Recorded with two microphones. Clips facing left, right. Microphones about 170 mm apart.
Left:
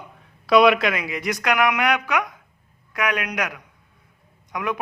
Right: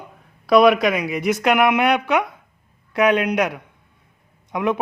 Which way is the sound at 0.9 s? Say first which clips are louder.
Right 6 dB; 15° right (ahead or behind).